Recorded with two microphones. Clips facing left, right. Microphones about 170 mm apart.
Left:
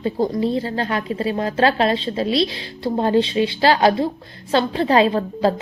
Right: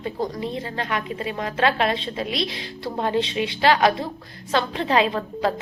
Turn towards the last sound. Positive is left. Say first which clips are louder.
# left 5 dB
turn(degrees=35)  # may be behind; listen again after turning